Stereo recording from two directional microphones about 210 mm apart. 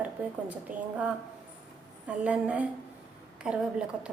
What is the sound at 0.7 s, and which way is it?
Speech, 40° right (ahead or behind).